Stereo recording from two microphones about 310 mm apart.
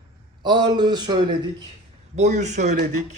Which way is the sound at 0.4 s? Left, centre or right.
Centre.